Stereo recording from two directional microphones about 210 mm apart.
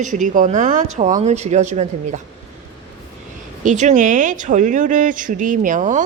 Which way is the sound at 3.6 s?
35° right (ahead or behind).